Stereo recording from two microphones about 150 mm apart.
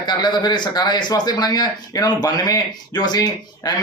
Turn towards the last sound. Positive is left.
turn(degrees=25)  # may be behind; listen again after turning